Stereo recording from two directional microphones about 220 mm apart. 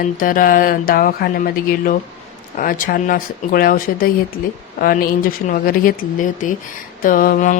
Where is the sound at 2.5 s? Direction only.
40° left (ahead or behind).